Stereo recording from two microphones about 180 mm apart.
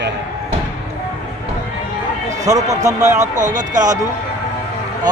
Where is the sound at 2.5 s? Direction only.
20° right (ahead or behind).